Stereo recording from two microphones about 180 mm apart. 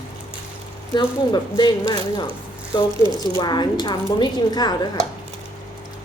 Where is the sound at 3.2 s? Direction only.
20° left (ahead or behind).